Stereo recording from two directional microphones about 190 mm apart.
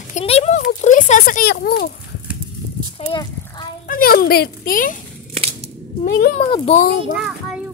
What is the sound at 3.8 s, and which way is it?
Speech, 50° left (ahead or behind).